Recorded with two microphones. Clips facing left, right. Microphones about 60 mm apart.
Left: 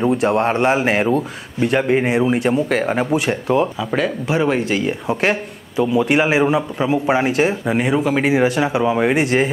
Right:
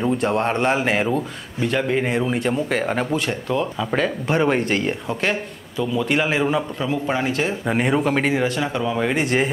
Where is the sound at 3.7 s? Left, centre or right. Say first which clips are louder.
Left 2 dB; centre.